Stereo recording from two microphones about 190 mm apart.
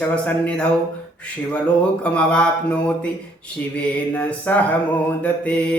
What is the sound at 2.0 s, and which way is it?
Speech, 5° left (ahead or behind).